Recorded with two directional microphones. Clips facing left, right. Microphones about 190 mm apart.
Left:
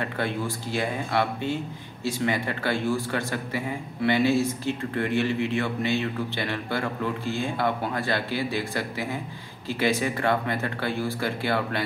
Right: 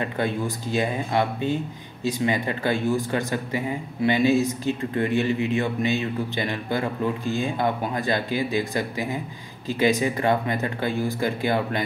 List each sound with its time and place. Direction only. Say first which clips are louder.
0.7 s speech: right 3 dB; 15° right (ahead or behind)